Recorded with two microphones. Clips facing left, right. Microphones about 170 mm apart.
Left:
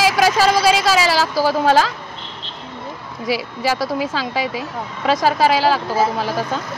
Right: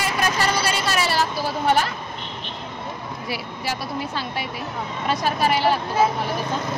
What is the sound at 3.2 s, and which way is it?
Speech, 90° left.